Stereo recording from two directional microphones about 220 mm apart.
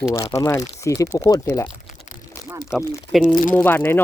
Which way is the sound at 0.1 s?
20° left (ahead or behind).